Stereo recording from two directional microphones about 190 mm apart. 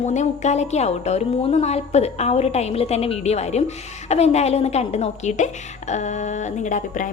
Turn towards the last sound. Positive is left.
turn(degrees=40)  # may be behind; listen again after turning